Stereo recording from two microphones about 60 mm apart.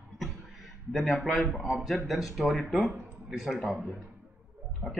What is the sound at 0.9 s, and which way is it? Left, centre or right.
A man's voice, centre.